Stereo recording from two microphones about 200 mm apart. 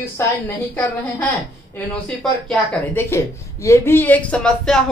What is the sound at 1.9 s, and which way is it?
A woman's voice, 5° left (ahead or behind).